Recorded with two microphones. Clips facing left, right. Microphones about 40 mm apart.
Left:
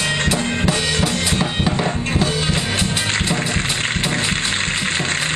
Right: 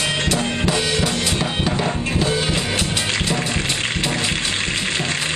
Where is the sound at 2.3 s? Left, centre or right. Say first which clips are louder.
Even; centre.